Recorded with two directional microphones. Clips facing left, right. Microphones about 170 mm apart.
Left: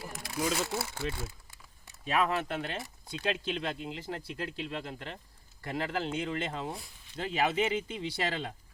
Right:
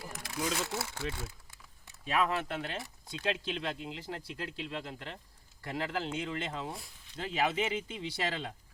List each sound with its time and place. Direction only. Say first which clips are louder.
0.2 s a sound: left 3 dB; 10° left (ahead or behind)
0.6 s speech: left 3 dB; 30° left (ahead or behind)
0.9 s speech: left 2 dB; 10° left (ahead or behind)
2.0 s speech: left 2 dB; 50° left (ahead or behind)